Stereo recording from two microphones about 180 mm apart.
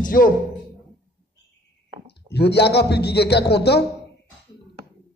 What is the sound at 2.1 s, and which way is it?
A man's voice, 65° left (ahead or behind).